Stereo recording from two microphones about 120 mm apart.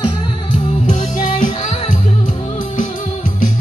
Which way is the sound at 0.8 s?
90° left.